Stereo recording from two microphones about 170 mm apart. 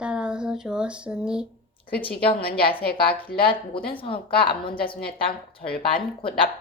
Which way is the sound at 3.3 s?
30° left (ahead or behind).